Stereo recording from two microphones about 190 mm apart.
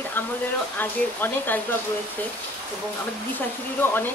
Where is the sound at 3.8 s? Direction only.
10° left (ahead or behind).